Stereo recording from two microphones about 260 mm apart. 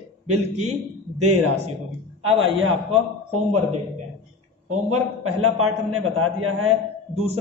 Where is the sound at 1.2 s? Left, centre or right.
Right.